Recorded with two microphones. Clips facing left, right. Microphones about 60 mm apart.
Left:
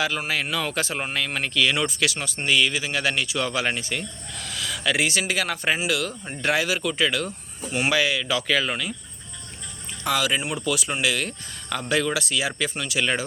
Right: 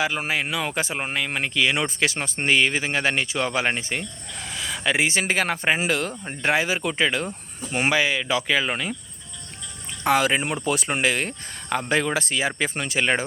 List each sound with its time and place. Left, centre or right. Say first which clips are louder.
0.0 s speech: right 1 dB; right
5.2 s speech: right 2 dB; right
10.0 s speech: right 4 dB; right